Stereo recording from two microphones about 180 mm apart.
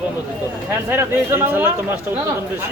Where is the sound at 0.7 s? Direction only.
10° right (ahead or behind).